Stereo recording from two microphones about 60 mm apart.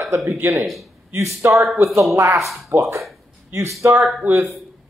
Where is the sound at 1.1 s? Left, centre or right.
Right.